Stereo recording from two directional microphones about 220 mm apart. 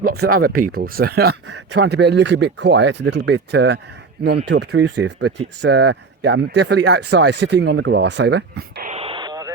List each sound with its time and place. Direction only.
0.0 s speech: 45° right (ahead or behind)
8.9 s radio: 25° right (ahead or behind)